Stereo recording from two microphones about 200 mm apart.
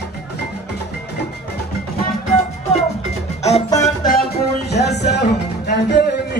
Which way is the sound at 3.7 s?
15° left (ahead or behind).